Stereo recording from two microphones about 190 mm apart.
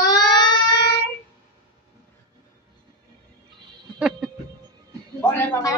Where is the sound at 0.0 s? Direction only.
20° left (ahead or behind).